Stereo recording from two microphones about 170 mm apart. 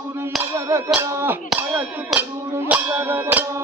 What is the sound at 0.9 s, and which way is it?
Music, 10° right (ahead or behind).